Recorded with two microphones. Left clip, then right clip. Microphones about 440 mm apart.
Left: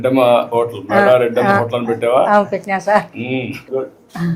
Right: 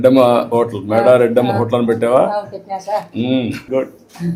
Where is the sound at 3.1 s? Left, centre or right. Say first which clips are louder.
Right 3 dB; right.